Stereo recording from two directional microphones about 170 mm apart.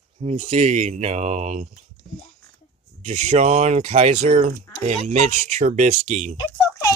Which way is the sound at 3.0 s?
40° right (ahead or behind).